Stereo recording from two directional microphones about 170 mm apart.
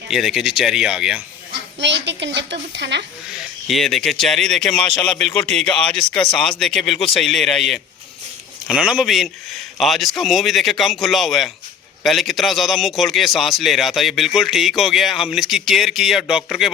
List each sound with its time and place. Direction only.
0.1 s a man's voice: centre (ahead or behind)
1.8 s a woman's voice: 90° right
3.7 s a man's voice: centre (ahead or behind)